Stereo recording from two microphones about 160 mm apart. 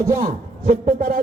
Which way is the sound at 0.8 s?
60° right (ahead or behind).